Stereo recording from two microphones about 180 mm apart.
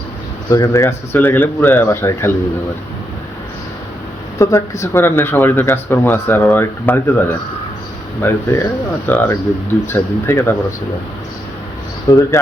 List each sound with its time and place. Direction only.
0.5 s speech: 15° left (ahead or behind)
4.4 s speech: 15° left (ahead or behind)
12.0 s speech: 20° left (ahead or behind)